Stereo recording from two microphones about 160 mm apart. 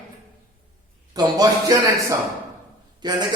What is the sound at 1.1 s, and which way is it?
A man's voice, 20° right (ahead or behind).